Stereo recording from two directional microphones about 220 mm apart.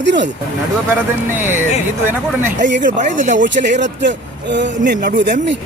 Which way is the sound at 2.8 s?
35° right (ahead or behind).